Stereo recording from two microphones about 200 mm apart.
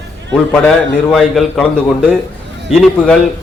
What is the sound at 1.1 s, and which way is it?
Speech, centre (ahead or behind).